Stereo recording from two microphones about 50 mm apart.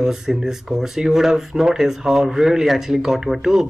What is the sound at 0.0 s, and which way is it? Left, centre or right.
Speech, centre.